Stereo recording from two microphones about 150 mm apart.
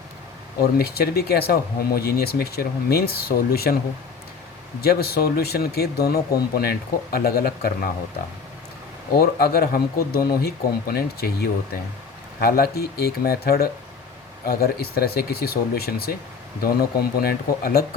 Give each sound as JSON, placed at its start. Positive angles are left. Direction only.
{"t": 0.6, "sound": "speech", "side_deg": 90}
{"t": 4.8, "sound": "speech", "side_deg": 90}
{"t": 9.1, "sound": "speech", "side_deg": 90}